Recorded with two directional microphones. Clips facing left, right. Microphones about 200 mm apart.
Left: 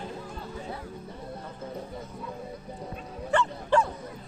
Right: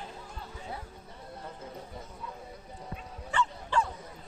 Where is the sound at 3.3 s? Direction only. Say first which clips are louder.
Left 6 dB; 55° left (ahead or behind).